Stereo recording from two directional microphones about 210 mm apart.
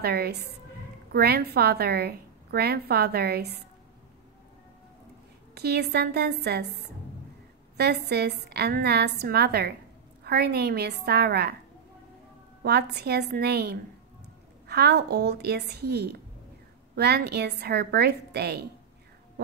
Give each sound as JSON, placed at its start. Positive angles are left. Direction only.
{"t": 0.0, "sound": "a woman's voice", "side_deg": -50}
{"t": 5.5, "sound": "a woman's voice", "side_deg": -50}
{"t": 12.6, "sound": "a woman's voice", "side_deg": -50}